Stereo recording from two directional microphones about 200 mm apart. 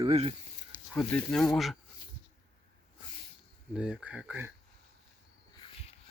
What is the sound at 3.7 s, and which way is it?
Speech, 5° right (ahead or behind).